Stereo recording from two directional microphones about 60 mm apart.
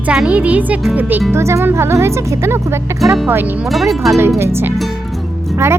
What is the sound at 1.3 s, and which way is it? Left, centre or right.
Speech, right.